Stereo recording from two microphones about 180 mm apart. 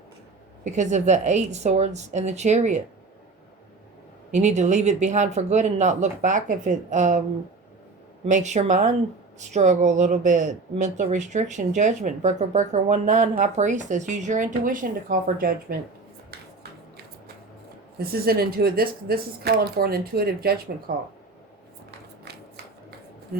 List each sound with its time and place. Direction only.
0.6 s speech: 40° right (ahead or behind)
4.3 s speech: 40° right (ahead or behind)
8.2 s speech: 40° right (ahead or behind)
17.9 s speech: 60° right (ahead or behind)
22.2 s a sound: 60° right (ahead or behind)